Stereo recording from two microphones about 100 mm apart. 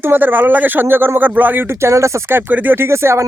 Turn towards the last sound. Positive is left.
turn(degrees=-25)  # may be behind; listen again after turning